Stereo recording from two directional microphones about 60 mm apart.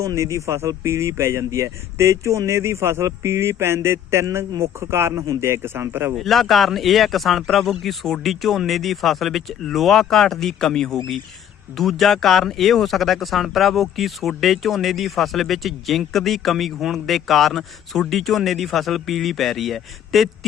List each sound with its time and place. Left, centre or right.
0.0 s a man's voice: right
6.1 s speech: centre